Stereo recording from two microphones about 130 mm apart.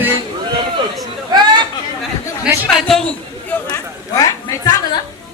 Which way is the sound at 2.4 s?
Centre (ahead or behind).